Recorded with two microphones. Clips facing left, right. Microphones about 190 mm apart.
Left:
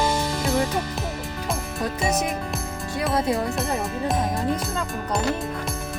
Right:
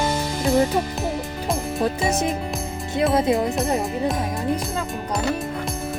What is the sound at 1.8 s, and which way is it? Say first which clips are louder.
Music: right 2 dB; 25° right (ahead or behind).